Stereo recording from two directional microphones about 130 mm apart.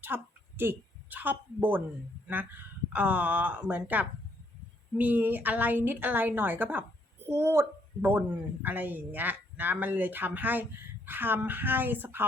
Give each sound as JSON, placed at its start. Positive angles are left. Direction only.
{"t": 0.0, "sound": "a woman's voice", "side_deg": -15}